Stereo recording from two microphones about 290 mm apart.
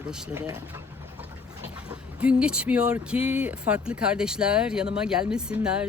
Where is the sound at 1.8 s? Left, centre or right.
Centre.